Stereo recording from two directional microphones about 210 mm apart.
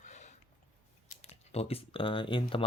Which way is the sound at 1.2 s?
30° left (ahead or behind).